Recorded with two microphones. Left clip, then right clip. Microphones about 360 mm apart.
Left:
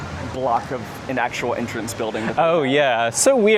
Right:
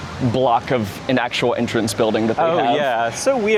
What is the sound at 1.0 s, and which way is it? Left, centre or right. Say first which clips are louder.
Speech: right 3 dB; right.